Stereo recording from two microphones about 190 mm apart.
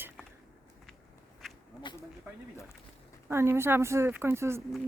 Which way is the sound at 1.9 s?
25° left (ahead or behind).